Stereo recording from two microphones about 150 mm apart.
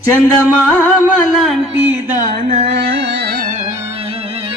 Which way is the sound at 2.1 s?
65° right (ahead or behind).